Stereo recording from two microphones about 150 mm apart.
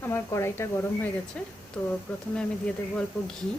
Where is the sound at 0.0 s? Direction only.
20° left (ahead or behind).